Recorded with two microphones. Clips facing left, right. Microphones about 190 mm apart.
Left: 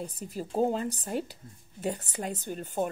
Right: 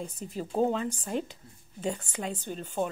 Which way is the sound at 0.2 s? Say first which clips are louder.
Even; 5° left (ahead or behind).